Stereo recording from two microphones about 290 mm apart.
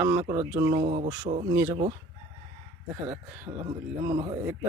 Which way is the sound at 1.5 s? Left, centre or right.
Centre.